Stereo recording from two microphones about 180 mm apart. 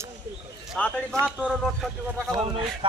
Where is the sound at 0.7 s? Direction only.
5° left (ahead or behind).